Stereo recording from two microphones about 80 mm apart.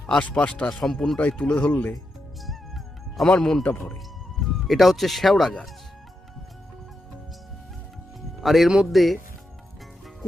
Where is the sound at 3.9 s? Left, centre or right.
Centre.